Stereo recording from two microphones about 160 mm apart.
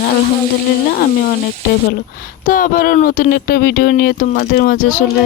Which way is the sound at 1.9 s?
60° left (ahead or behind).